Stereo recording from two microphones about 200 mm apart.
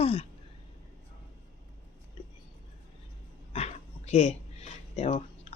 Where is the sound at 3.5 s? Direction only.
30° left (ahead or behind).